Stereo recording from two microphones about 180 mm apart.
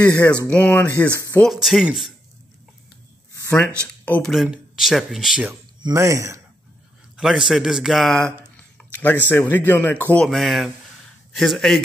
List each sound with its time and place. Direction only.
0.0 s speech: 5° left (ahead or behind)
1.5 s speech: centre (ahead or behind)
3.4 s speech: 10° left (ahead or behind)
5.8 s speech: 20° right (ahead or behind)
7.2 s speech: 5° right (ahead or behind)
8.5 s a sound: 10° left (ahead or behind)
9.3 s speech: 10° left (ahead or behind)